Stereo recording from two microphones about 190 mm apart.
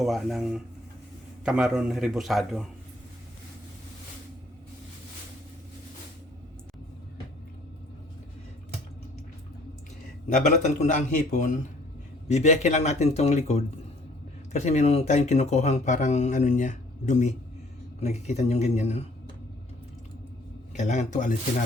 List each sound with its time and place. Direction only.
0.0 s a man's voice: centre (ahead or behind)
10.4 s speech: 40° left (ahead or behind)
20.7 s speech: 40° left (ahead or behind)